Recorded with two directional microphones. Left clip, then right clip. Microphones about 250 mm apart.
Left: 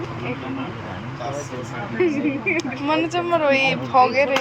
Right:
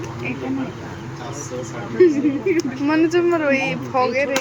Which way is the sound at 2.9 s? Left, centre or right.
Centre.